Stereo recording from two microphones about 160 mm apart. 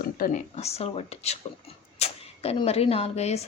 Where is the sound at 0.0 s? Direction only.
60° left (ahead or behind).